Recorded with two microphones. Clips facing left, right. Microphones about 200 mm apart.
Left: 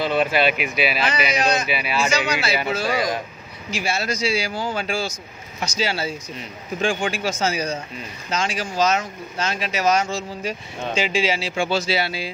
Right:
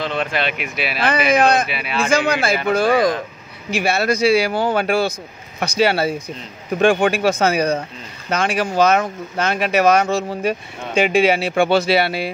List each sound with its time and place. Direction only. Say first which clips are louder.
0.0 s speech: left 3 dB; 5° left (ahead or behind)
1.0 s speech: right 6 dB; 55° right (ahead or behind)
1.7 s speech: left 2 dB; centre (ahead or behind)
2.0 s speech: right 8 dB; 55° right (ahead or behind)